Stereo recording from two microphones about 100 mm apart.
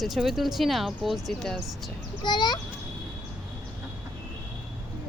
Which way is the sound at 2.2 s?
50° left (ahead or behind).